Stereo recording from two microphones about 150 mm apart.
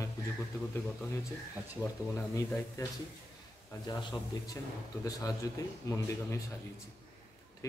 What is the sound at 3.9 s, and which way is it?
Speech, 25° left (ahead or behind).